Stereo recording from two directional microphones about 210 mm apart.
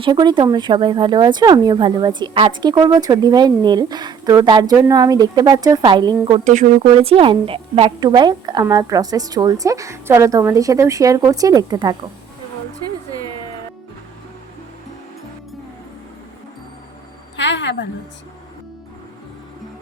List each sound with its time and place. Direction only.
0.0 s speech: 20° right (ahead or behind)
6.4 s a woman's voice: 35° right (ahead or behind); by 11.9 s 20° right (ahead or behind)
17.3 s a woman's voice: 60° left (ahead or behind)